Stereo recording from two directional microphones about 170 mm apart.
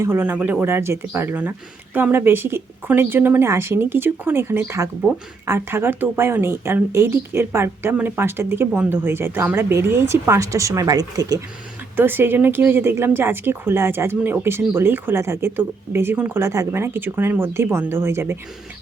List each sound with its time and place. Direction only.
0.0 s speech: 10° right (ahead or behind)